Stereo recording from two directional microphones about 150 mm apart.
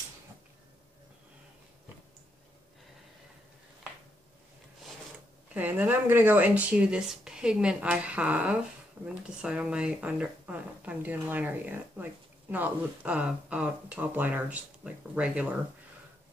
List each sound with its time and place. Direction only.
5.5 s speech: 10° right (ahead or behind)